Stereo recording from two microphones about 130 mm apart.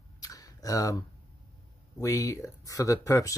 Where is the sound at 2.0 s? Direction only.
25° left (ahead or behind).